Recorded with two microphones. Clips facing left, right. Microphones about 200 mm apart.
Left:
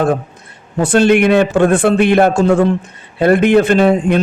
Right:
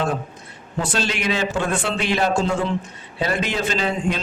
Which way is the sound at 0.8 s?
55° left (ahead or behind).